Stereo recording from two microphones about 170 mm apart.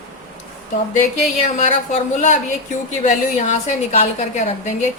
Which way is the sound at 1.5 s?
45° left (ahead or behind).